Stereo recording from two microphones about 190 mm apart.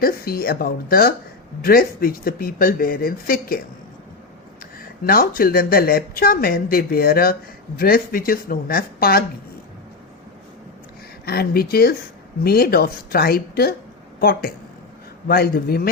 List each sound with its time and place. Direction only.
0.0 s a woman's voice: 50° left (ahead or behind)
4.8 s a woman's voice: 50° left (ahead or behind)
11.3 s a woman's voice: 55° left (ahead or behind)